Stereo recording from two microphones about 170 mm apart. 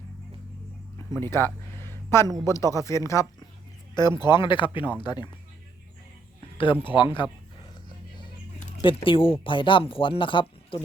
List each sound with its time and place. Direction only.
1.2 s a sound: 15° left (ahead or behind)
2.2 s speech: 20° right (ahead or behind)
2.5 s speech: 15° left (ahead or behind)
6.8 s speech: 30° left (ahead or behind)
7.9 s music: 25° left (ahead or behind)
8.8 s speech: 30° left (ahead or behind)